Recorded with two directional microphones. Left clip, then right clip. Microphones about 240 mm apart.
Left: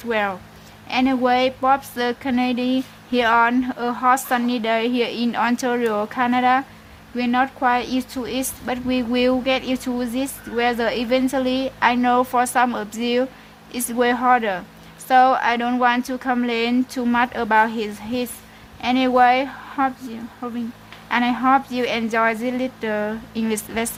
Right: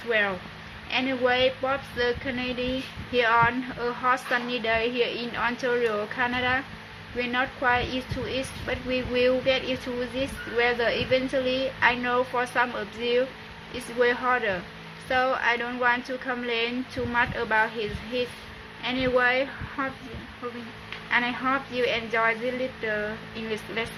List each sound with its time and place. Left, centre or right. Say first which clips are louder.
0.1 s a woman's voice: left 3 dB; left
21.1 s a woman's voice: left 7 dB; left